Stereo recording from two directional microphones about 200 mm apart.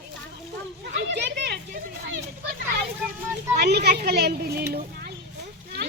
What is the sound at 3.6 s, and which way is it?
Children playing, 55° right (ahead or behind).